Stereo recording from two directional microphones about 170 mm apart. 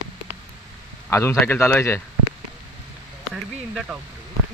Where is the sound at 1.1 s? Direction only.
15° left (ahead or behind).